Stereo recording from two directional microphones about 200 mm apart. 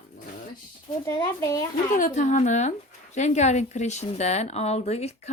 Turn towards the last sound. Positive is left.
turn(degrees=30)  # may be behind; listen again after turning